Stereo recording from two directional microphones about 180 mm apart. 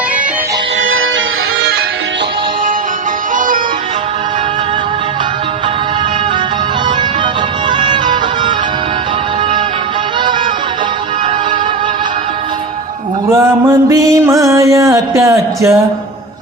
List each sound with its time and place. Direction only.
7.8 s music: 25° right (ahead or behind)
13.8 s music: 15° right (ahead or behind)